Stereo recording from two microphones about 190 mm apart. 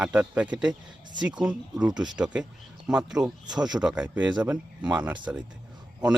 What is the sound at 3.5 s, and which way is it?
Speech, 20° right (ahead or behind).